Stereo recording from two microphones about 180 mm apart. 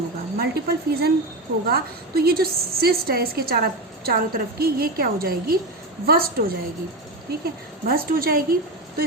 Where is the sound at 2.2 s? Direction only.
60° right (ahead or behind).